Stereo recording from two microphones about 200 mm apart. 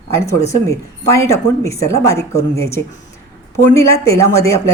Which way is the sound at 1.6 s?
15° left (ahead or behind).